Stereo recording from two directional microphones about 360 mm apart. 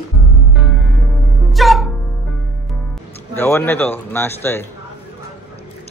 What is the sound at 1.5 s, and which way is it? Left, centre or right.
Music, centre.